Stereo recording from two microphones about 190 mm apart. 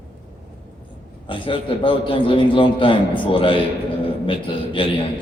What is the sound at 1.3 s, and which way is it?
A man's voice, 25° left (ahead or behind).